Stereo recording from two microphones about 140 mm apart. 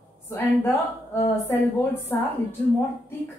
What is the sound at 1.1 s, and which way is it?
Speech, 15° left (ahead or behind).